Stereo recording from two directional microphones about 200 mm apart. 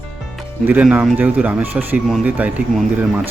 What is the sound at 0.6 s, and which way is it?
Speech, 10° right (ahead or behind).